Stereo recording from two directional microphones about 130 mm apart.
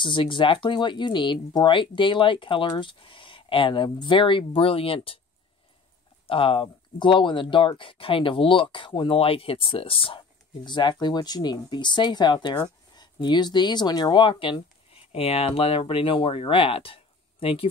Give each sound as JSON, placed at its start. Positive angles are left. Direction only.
{"t": 0.0, "sound": "speech", "side_deg": 40}
{"t": 6.2, "sound": "speech", "side_deg": 45}
{"t": 15.1, "sound": "speech", "side_deg": 50}